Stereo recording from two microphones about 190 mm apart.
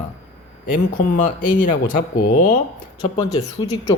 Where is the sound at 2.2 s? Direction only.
45° left (ahead or behind).